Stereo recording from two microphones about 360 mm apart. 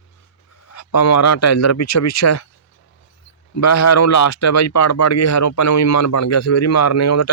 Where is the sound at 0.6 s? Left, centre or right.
Left.